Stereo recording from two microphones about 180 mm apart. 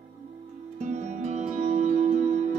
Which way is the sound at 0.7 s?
40° right (ahead or behind).